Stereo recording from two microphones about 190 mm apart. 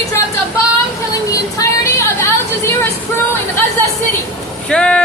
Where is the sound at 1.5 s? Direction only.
15° left (ahead or behind).